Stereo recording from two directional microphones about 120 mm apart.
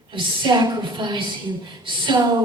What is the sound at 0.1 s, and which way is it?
A woman's voice, 40° right (ahead or behind).